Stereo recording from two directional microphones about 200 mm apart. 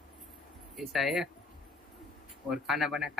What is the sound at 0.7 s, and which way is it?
Speech, centre (ahead or behind).